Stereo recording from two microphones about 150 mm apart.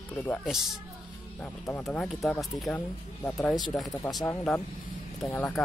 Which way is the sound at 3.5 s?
25° left (ahead or behind).